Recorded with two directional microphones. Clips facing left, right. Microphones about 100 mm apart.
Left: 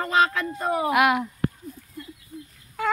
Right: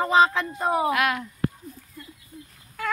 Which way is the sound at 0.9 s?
20° left (ahead or behind).